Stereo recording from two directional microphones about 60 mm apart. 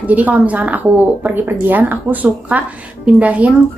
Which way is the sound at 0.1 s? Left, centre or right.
Right.